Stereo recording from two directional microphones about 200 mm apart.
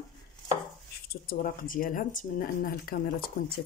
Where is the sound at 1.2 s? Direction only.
45° left (ahead or behind).